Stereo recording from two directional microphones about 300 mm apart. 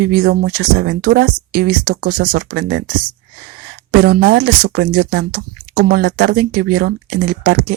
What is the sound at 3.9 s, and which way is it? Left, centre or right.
Speech, right.